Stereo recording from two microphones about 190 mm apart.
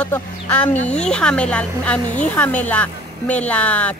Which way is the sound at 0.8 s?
35° left (ahead or behind).